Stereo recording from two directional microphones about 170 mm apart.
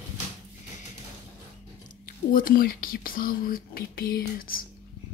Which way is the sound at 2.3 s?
55° left (ahead or behind).